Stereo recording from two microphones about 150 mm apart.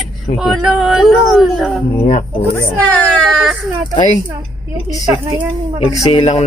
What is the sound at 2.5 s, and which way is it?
Baby cry, 10° left (ahead or behind).